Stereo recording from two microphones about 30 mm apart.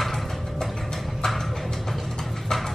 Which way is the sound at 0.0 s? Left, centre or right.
Centre.